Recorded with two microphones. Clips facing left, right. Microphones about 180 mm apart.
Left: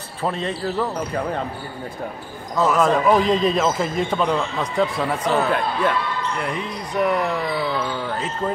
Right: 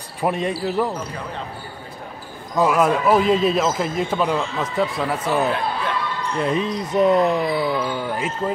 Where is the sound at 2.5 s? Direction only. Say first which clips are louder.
Even; 10° right (ahead or behind).